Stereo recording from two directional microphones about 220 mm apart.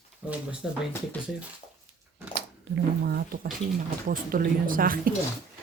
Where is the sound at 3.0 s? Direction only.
45° right (ahead or behind).